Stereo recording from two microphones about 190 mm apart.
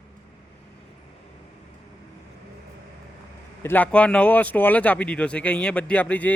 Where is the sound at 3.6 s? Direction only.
10° left (ahead or behind).